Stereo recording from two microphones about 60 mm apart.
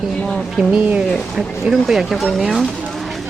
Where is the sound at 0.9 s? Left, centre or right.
Right.